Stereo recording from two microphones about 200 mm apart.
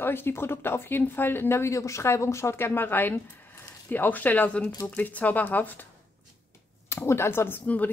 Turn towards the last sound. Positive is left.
turn(degrees=10)  # may be behind; listen again after turning